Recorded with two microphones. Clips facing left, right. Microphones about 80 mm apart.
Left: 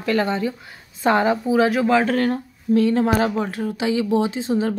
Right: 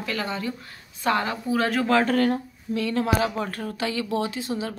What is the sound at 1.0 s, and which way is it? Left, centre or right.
Speech, left.